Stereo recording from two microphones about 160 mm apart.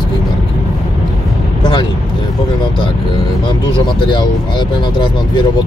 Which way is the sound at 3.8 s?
30° left (ahead or behind).